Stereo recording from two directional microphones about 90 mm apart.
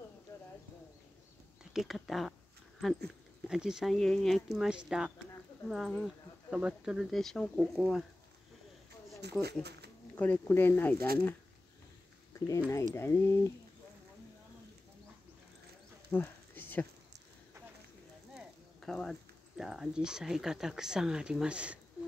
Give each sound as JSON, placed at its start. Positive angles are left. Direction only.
{"t": 1.7, "sound": "speech", "side_deg": 0}
{"t": 3.4, "sound": "speech", "side_deg": -5}
{"t": 3.9, "sound": "speech", "side_deg": 5}
{"t": 10.1, "sound": "speech", "side_deg": 20}
{"t": 12.4, "sound": "speech", "side_deg": 35}
{"t": 16.1, "sound": "a sound", "side_deg": 20}
{"t": 18.8, "sound": "speech", "side_deg": 5}